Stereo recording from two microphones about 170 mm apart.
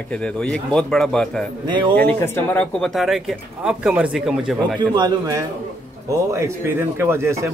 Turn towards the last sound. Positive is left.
turn(degrees=-15)  # may be behind; listen again after turning